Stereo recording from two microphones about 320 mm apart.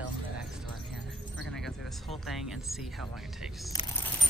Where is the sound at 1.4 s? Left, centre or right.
Centre.